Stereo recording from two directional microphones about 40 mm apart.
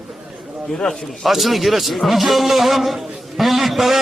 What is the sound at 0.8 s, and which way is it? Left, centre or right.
Speech, left.